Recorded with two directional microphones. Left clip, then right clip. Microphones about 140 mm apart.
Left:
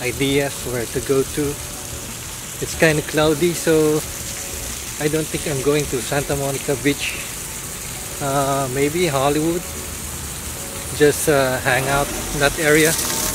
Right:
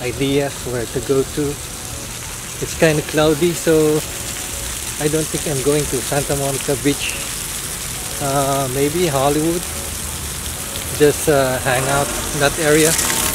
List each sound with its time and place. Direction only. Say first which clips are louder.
0.0 s speech: right 1 dB; centre (ahead or behind)
2.8 s speech: right 1 dB; centre (ahead or behind)
5.0 s speech: right 2 dB; 5° right (ahead or behind)
8.3 s speech: right 1 dB; centre (ahead or behind)
11.0 s speech: right 1 dB; centre (ahead or behind)
13.0 s a sound: right 4 dB; 30° right (ahead or behind)